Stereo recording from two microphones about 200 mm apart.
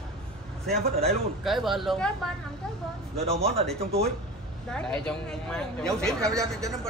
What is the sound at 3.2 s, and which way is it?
Speech, 30° right (ahead or behind).